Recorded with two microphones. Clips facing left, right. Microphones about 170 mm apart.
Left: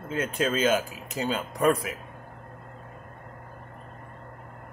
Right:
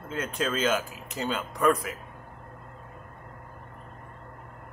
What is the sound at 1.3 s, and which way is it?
Speech, 35° left (ahead or behind).